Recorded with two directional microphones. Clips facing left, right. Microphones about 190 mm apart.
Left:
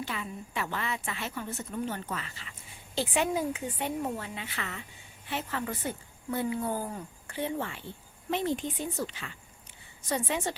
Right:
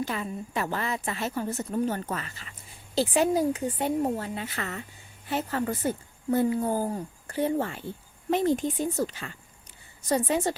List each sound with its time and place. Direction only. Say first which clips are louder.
0.0 s a woman's voice: right 6 dB; 40° right (ahead or behind)